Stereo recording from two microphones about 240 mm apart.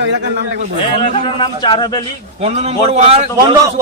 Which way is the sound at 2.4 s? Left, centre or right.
Right.